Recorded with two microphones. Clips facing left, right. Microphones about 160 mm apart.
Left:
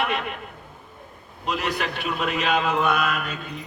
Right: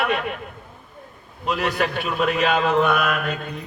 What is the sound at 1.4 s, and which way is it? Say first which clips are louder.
A man's voice: right 4 dB; 50° right (ahead or behind).